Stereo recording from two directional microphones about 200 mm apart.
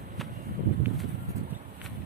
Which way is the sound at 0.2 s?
Centre (ahead or behind).